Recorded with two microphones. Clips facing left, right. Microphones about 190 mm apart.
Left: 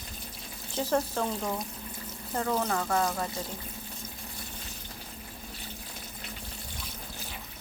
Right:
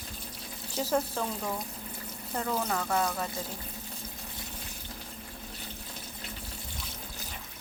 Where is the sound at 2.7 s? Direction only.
Centre (ahead or behind).